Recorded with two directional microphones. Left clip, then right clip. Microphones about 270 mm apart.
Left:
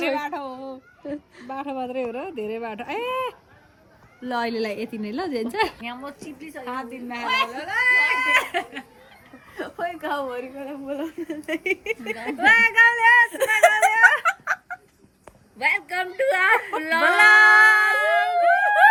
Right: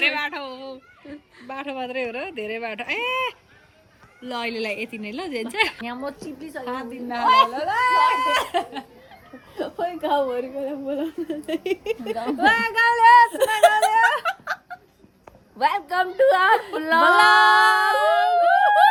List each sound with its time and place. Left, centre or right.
0.1 s a woman's voice: centre
5.8 s a woman's voice: right
15.5 s a woman's voice: centre
17.9 s howl: centre